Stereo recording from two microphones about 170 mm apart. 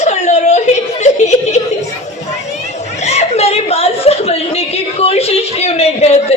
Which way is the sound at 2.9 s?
40° left (ahead or behind).